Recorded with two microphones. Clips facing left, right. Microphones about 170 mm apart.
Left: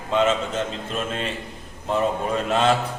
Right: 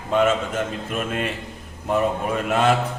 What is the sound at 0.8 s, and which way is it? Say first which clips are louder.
Speech: right 2 dB; 10° right (ahead or behind).